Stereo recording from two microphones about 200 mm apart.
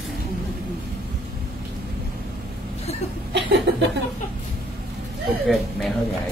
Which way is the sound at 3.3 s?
60° right (ahead or behind).